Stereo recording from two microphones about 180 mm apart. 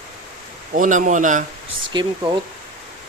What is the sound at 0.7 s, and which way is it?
Speech, 45° right (ahead or behind).